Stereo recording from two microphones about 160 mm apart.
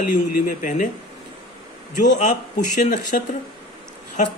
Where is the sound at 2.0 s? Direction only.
50° left (ahead or behind).